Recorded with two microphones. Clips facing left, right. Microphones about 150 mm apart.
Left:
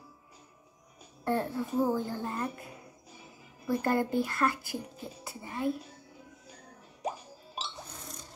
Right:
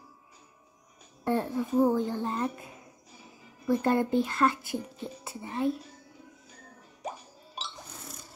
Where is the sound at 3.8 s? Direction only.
20° right (ahead or behind).